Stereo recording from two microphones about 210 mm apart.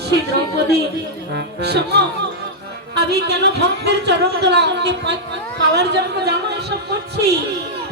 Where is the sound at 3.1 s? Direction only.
55° right (ahead or behind).